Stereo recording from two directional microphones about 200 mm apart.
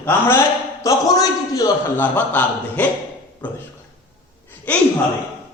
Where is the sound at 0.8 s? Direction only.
15° left (ahead or behind).